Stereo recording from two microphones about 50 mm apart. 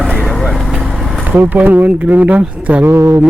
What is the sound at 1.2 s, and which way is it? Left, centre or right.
Speech, right.